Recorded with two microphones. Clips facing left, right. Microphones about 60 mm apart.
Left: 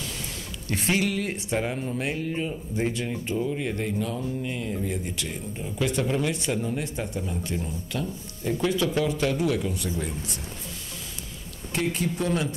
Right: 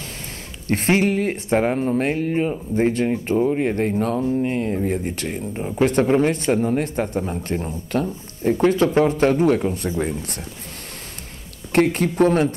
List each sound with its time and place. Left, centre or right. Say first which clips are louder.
0.7 s speech: right 7 dB; right
11.7 s speech: right 9 dB; right